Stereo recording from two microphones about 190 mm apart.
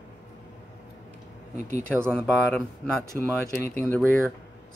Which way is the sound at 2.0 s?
5° left (ahead or behind).